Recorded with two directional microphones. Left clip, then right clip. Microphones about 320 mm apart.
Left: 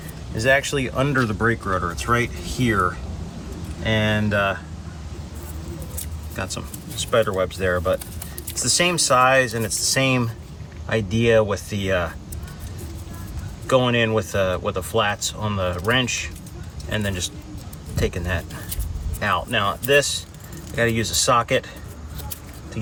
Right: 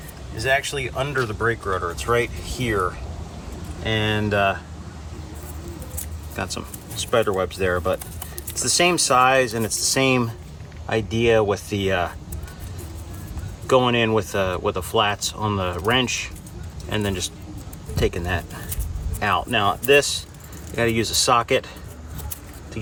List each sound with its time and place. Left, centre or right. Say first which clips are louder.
0.3 s speech: left 3 dB; centre
6.3 s speech: right 1 dB; centre
13.7 s speech: right 1 dB; centre